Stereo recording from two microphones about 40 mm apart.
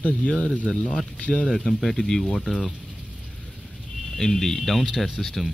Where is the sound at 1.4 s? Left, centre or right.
Centre.